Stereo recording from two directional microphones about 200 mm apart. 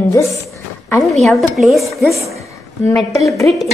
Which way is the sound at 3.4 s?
15° left (ahead or behind).